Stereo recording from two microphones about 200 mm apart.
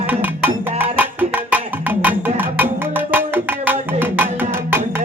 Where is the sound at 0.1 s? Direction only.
10° right (ahead or behind).